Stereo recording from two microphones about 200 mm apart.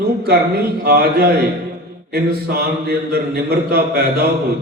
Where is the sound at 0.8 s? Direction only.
50° right (ahead or behind).